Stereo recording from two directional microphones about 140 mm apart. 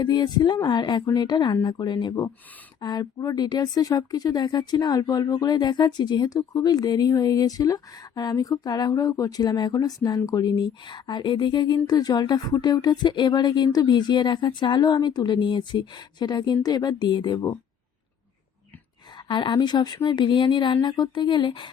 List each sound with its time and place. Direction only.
0.0 s speech: 30° left (ahead or behind)
19.3 s speech: 35° left (ahead or behind)